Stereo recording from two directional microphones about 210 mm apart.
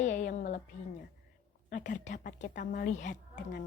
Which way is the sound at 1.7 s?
35° left (ahead or behind).